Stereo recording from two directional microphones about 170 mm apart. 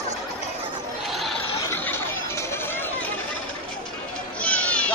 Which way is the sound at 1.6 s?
15° left (ahead or behind).